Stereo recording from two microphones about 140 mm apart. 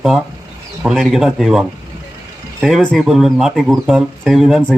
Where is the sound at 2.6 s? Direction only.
Centre (ahead or behind).